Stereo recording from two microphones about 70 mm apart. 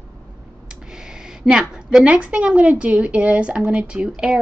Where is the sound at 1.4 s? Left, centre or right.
Centre.